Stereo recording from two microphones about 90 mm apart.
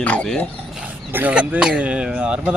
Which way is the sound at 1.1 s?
20° right (ahead or behind).